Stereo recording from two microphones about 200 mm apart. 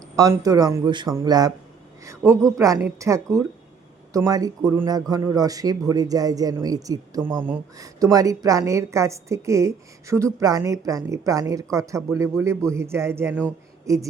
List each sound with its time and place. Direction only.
0.2 s a man's voice: 15° right (ahead or behind)
7.2 s speech: 5° left (ahead or behind)
7.4 s a man's voice: 15° right (ahead or behind)